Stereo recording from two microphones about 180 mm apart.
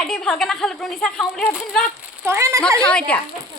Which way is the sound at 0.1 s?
Centre (ahead or behind).